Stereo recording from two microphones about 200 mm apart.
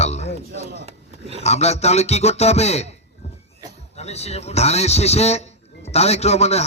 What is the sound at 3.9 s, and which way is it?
A man's voice, 30° left (ahead or behind).